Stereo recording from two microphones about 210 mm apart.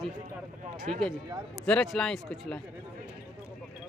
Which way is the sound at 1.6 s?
5° left (ahead or behind).